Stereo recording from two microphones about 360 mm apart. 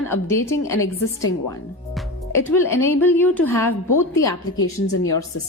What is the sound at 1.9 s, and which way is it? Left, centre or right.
A woman's voice, centre.